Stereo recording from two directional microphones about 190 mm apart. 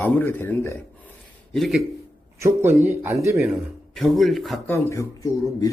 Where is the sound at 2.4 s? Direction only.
15° right (ahead or behind).